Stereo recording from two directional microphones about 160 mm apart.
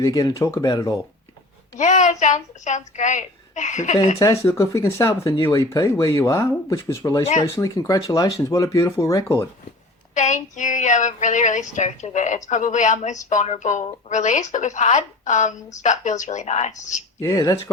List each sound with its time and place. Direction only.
0.0 s speech: 25° left (ahead or behind)
1.8 s a woman's voice: 50° left (ahead or behind)
4.2 s speech: 20° left (ahead or behind)
10.2 s a woman's voice: 50° left (ahead or behind)
17.2 s speech: 20° left (ahead or behind)